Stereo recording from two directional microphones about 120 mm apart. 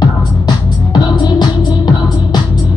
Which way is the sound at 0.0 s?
35° left (ahead or behind).